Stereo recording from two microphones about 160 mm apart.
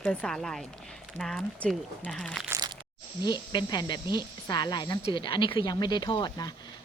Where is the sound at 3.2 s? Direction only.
25° left (ahead or behind).